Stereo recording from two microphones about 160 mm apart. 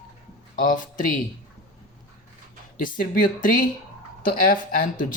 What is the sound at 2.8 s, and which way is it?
Speech, 60° left (ahead or behind).